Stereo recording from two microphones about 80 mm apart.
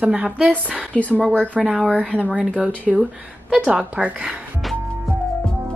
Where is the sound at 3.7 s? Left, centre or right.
Centre.